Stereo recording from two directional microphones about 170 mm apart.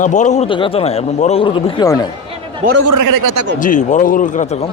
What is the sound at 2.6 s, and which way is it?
Speech, 50° right (ahead or behind).